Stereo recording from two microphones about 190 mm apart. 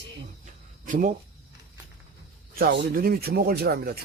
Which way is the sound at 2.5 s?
50° right (ahead or behind).